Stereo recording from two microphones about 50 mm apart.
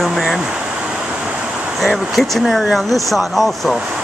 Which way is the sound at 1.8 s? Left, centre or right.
Centre.